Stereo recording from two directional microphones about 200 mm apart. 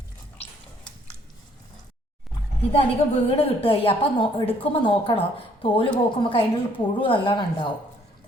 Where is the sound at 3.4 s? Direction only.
30° left (ahead or behind).